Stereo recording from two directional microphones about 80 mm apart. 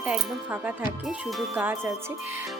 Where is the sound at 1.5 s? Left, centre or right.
Right.